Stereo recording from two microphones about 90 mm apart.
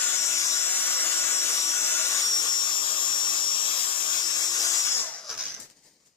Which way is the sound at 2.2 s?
45° left (ahead or behind).